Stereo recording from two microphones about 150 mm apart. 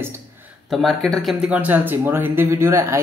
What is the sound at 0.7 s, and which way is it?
Speech, centre (ahead or behind).